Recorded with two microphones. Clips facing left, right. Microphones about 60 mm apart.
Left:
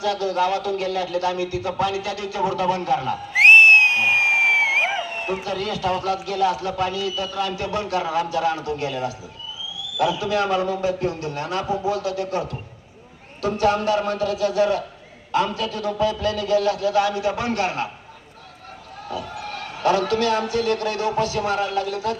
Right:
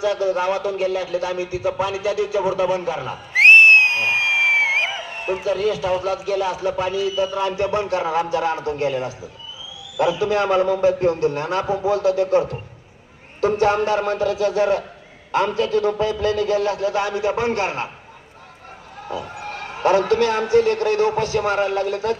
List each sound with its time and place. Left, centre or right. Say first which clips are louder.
0.0 s a man's voice: right 2 dB; right
3.8 s music: left 1 dB; centre
5.2 s a man's voice: right 5 dB; centre; by 17.8 s right
19.0 s a man's voice: right 1 dB; right